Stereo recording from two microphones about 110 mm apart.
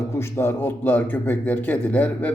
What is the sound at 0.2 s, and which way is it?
Speech, 20° left (ahead or behind).